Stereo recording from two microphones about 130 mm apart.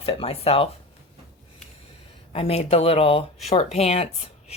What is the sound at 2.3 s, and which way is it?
Speech, 50° left (ahead or behind).